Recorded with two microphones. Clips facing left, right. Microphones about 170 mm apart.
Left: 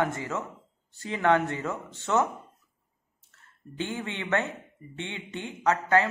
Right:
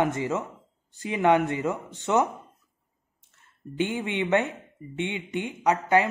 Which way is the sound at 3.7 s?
20° right (ahead or behind).